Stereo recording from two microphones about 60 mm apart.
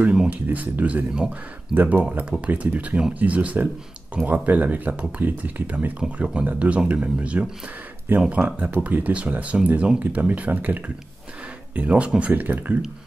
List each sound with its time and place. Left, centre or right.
0.1 s a sound: centre
0.5 s speech: right
1.1 s speech: centre
1.8 s speech: right